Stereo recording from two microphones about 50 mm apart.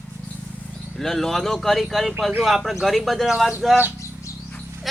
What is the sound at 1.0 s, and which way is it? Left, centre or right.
Speech, centre.